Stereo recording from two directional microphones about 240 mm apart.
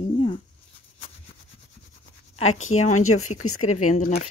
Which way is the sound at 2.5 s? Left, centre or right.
Left.